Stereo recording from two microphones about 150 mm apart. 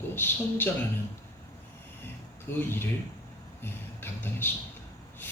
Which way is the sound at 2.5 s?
15° left (ahead or behind).